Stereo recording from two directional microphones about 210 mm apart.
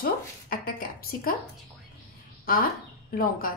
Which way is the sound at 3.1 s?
40° left (ahead or behind).